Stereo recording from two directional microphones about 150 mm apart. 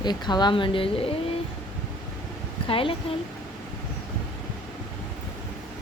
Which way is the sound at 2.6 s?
35° left (ahead or behind).